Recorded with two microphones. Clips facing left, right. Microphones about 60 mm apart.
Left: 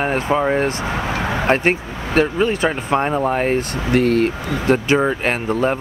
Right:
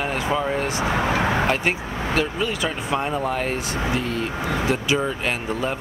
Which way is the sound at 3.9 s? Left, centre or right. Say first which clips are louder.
Left 9 dB; left.